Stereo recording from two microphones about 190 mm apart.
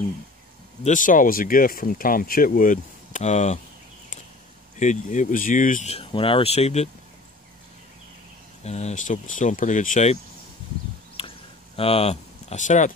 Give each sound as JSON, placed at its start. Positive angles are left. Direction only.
{"t": 0.8, "sound": "speech", "side_deg": 45}
{"t": 4.7, "sound": "speech", "side_deg": 40}
{"t": 8.6, "sound": "speech", "side_deg": 35}
{"t": 11.1, "sound": "a sound", "side_deg": 30}